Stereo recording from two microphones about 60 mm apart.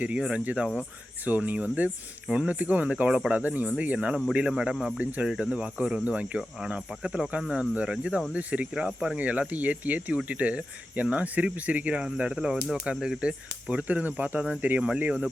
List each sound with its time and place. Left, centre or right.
0.2 s speech: centre
0.8 s speech: right